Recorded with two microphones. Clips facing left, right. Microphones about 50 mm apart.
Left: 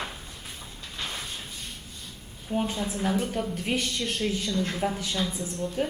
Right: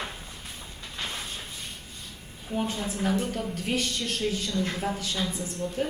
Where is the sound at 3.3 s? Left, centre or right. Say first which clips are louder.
Left 1 dB; centre.